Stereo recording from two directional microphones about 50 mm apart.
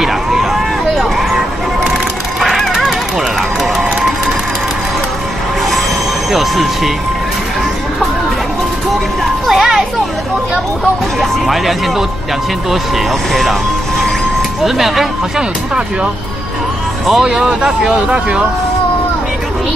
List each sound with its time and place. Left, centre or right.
0.0 s a sound: centre
2.4 s music: centre
2.7 s run: centre
6.3 s speech: centre
9.2 s music: centre
11.1 s speech: centre
12.9 s speech: centre
14.6 s speech: centre
17.1 s speech: centre